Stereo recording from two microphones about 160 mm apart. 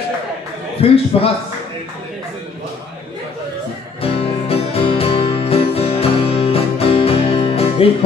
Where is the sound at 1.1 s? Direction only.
40° left (ahead or behind).